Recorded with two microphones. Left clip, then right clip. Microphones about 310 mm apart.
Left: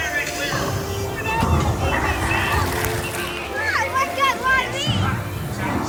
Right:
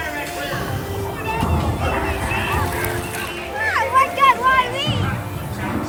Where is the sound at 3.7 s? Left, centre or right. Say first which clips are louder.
Right 5 dB; right.